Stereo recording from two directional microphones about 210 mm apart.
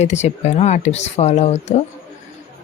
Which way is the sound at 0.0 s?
30° left (ahead or behind).